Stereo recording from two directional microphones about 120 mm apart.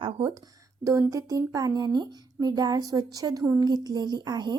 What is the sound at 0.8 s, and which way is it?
Speech, 25° right (ahead or behind).